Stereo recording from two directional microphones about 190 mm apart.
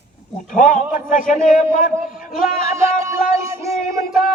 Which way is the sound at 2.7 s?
15° right (ahead or behind).